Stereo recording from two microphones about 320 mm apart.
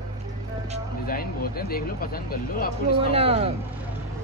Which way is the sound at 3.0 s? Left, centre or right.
Centre.